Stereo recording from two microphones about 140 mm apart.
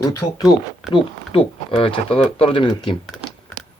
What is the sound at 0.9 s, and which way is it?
Speech, 40° left (ahead or behind).